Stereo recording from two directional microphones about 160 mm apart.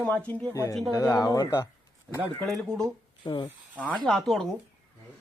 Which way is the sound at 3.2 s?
30° left (ahead or behind).